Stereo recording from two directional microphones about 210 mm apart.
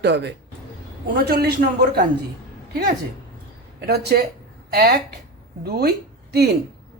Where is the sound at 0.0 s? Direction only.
55° right (ahead or behind).